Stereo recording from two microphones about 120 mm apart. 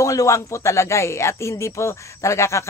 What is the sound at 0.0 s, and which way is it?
Speech, 25° left (ahead or behind).